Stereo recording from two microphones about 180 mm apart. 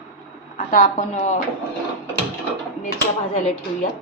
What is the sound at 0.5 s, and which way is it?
Speech, 45° left (ahead or behind).